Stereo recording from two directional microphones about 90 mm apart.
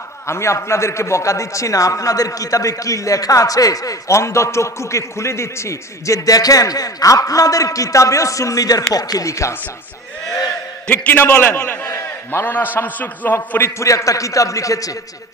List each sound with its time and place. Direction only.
0.3 s a man's voice: 30° left (ahead or behind)
10.9 s a man's voice: 20° left (ahead or behind)
11.8 s a sound: 30° left (ahead or behind)
12.7 s a man's voice: 20° left (ahead or behind)
13.7 s a man's voice: 35° left (ahead or behind)